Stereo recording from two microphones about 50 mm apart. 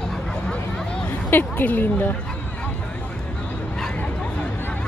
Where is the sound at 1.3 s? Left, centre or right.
Left.